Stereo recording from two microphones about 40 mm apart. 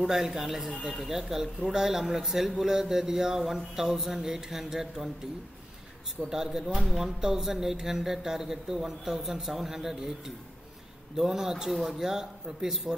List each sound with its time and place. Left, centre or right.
0.0 s a man's voice: centre
6.3 s a man's voice: centre